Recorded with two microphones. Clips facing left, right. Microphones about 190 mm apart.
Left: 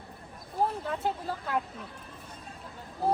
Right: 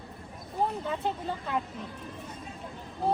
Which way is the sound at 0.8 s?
5° left (ahead or behind).